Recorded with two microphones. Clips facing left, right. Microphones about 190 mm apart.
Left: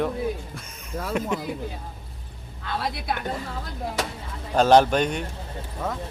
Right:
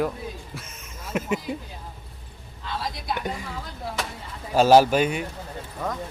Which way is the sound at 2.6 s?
60° left (ahead or behind).